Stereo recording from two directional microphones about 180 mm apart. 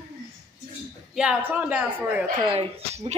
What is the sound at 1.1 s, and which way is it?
A woman's voice, 5° right (ahead or behind).